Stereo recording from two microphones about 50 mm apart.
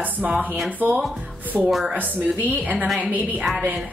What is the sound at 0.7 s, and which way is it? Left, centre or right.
Speech, right.